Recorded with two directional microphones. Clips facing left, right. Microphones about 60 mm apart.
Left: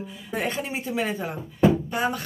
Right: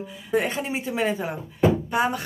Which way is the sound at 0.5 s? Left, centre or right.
Right.